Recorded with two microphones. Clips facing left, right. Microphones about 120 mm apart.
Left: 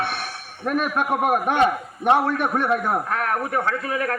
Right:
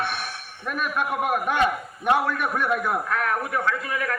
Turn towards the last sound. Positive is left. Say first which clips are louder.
# left 2 dB
turn(degrees=40)  # may be behind; listen again after turning